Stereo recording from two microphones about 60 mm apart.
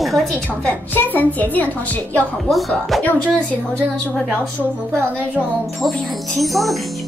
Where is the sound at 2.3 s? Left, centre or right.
Centre.